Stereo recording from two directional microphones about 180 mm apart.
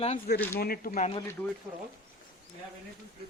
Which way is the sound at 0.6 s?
55° left (ahead or behind).